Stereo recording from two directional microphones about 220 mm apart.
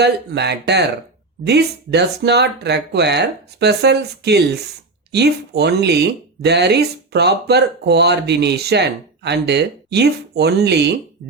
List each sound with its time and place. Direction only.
0.0 s speech: 50° right (ahead or behind)